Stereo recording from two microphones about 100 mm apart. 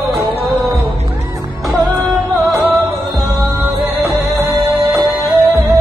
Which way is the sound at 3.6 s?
25° right (ahead or behind).